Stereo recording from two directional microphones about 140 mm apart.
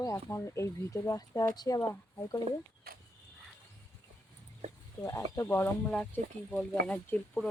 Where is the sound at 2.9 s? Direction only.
90° right.